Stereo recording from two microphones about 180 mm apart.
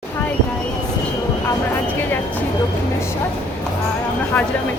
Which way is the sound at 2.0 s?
10° left (ahead or behind).